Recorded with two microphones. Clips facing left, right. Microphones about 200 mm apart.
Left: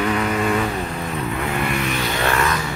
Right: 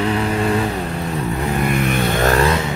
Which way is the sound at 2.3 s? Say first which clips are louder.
Right 5 dB; 30° right (ahead or behind).